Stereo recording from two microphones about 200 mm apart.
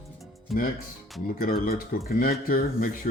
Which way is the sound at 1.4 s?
50° left (ahead or behind).